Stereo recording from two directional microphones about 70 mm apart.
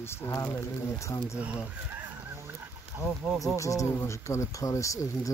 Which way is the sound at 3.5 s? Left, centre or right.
Left.